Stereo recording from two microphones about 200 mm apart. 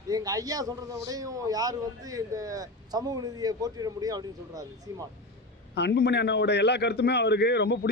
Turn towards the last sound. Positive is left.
turn(degrees=55)  # may be behind; listen again after turning